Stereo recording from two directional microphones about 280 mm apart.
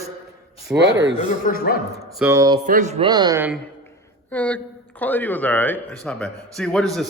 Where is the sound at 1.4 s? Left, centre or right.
Left.